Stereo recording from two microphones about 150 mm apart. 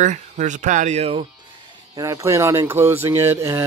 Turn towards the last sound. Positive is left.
turn(degrees=-15)  # may be behind; listen again after turning